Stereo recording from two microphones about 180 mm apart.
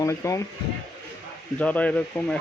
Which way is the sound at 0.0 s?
15° left (ahead or behind).